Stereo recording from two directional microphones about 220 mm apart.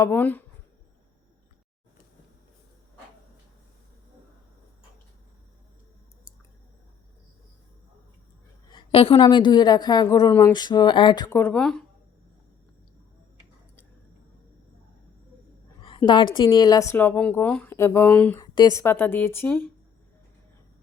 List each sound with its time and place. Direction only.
0.0 s speech: 10° left (ahead or behind)
8.7 s a woman's voice: 25° left (ahead or behind)
11.3 s speech: 10° left (ahead or behind)
16.0 s speech: 20° left (ahead or behind)